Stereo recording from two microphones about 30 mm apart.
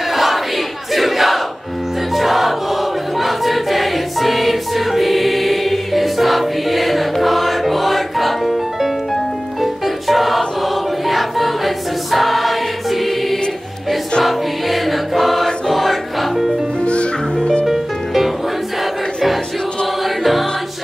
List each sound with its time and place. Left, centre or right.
0.1 s battle cry: centre
2.1 s music: centre
11.1 s choir: centre
14.2 s music: centre
16.8 s music: left
17.6 s music: centre